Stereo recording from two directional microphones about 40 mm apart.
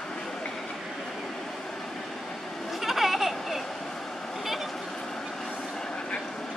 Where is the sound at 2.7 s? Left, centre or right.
Centre.